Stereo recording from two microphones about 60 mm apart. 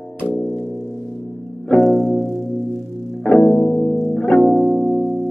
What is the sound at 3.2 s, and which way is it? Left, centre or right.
Music, centre.